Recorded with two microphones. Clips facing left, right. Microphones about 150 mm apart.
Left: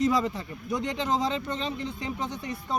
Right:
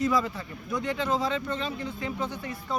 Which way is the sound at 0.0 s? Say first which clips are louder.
Left 1 dB; 25° left (ahead or behind).